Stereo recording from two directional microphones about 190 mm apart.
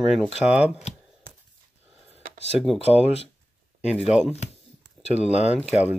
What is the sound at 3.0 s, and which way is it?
Speech, 30° left (ahead or behind).